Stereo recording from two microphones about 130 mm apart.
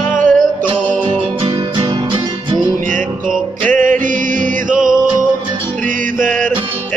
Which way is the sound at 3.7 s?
90° right.